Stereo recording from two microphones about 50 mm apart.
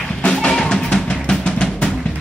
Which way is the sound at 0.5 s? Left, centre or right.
Centre.